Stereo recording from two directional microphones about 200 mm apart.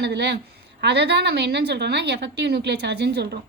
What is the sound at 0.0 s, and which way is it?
A woman's voice, 55° right (ahead or behind).